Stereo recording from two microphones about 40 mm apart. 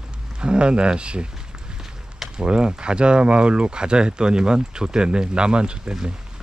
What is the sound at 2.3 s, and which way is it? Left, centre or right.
Speech, right.